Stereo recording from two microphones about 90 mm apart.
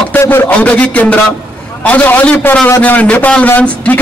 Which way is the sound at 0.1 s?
25° left (ahead or behind).